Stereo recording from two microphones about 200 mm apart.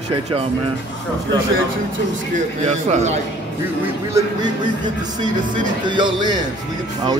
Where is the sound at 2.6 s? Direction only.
35° right (ahead or behind).